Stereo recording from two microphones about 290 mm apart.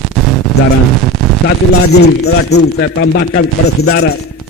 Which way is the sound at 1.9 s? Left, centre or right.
Left.